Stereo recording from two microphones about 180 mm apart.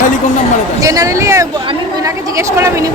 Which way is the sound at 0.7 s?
20° right (ahead or behind).